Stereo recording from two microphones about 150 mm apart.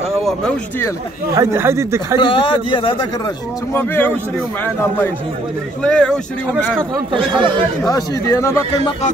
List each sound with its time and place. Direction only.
0.2 s a sound: centre (ahead or behind)
1.3 s speech: 20° right (ahead or behind)
2.1 s a man's voice: 35° left (ahead or behind)
3.7 s speech: 15° left (ahead or behind)
5.8 s speech: 5° left (ahead or behind)
7.1 s speech: 35° right (ahead or behind)
7.9 s a man's voice: 20° left (ahead or behind)